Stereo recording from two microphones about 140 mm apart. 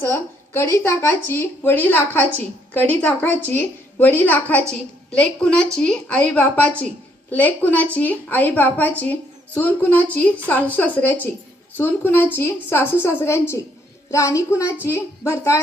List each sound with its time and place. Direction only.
0.1 s a woman's voice: 20° left (ahead or behind)